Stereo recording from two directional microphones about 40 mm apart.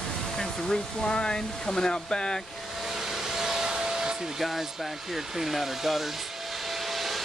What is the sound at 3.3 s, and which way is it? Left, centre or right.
Steam, centre.